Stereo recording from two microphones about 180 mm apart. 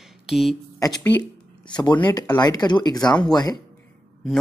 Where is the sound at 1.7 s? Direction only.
25° left (ahead or behind).